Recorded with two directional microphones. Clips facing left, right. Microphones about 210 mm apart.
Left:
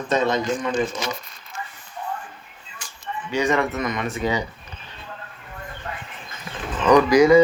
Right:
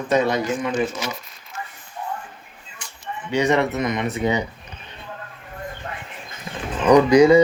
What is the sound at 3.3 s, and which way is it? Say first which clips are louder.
Speech: right 2 dB; 25° right (ahead or behind).